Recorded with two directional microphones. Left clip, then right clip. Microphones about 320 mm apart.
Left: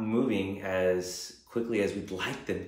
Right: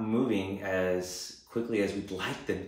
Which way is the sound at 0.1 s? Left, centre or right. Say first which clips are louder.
Left 1 dB; centre.